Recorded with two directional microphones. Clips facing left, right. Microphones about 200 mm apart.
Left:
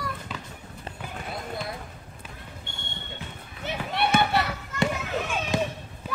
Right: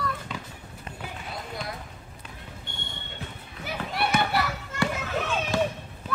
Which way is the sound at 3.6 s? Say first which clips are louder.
Left 2 dB; 25° left (ahead or behind).